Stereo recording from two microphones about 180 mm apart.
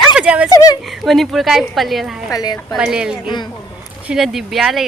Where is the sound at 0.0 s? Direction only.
5° right (ahead or behind).